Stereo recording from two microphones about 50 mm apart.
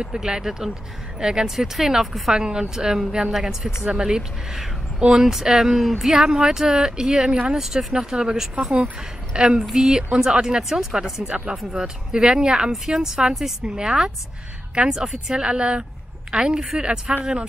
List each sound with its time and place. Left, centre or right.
0.0 s a woman's voice: centre